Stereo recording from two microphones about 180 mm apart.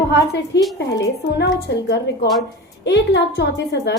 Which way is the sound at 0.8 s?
70° left (ahead or behind).